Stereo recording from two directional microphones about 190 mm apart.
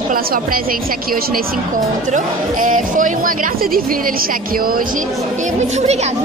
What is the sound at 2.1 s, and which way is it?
Speech, 45° right (ahead or behind).